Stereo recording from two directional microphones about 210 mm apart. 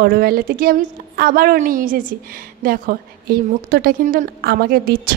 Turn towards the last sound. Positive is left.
turn(degrees=-45)  # may be behind; listen again after turning